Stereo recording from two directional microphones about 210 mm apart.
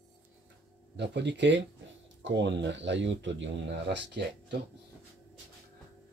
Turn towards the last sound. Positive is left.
turn(degrees=-55)  # may be behind; listen again after turning